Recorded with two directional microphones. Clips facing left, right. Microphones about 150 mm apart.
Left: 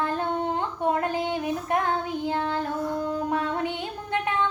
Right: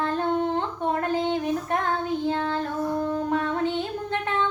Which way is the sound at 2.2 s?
15° left (ahead or behind).